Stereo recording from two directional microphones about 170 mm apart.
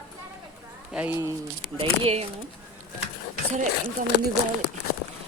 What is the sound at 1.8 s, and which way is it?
Speech, 35° right (ahead or behind).